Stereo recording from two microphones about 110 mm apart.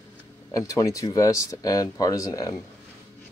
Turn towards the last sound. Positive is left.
turn(degrees=35)  # may be behind; listen again after turning